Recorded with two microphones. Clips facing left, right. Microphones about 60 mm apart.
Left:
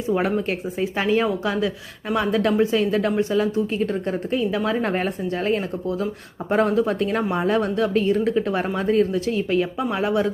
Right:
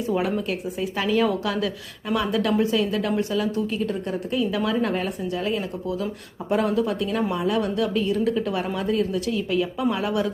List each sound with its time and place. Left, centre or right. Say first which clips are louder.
0.2 s a woman's voice: left 2 dB; left